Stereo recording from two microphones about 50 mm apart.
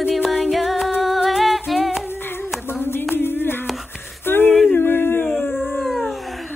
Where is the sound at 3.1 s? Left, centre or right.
Left.